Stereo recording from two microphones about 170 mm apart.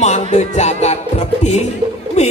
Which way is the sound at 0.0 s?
40° left (ahead or behind).